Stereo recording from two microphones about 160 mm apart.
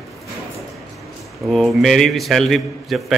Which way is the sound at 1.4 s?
Centre (ahead or behind).